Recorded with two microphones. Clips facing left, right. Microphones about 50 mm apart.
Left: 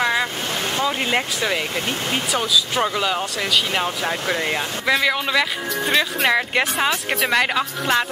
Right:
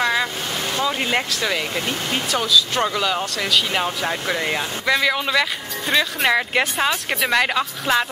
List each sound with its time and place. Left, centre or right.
0.0 s boat: centre
0.8 s speech: centre